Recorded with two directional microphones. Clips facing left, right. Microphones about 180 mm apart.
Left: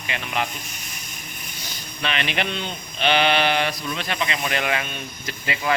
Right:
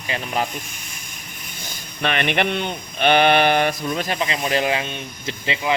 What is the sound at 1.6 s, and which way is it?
Speech, 50° right (ahead or behind).